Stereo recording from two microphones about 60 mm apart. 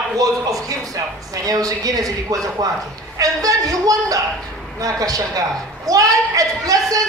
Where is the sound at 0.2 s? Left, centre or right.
Right.